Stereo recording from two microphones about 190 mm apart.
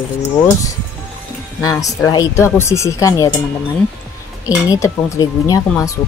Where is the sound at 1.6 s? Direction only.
15° left (ahead or behind).